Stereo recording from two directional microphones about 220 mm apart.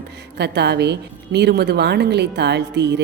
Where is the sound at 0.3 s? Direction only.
50° right (ahead or behind).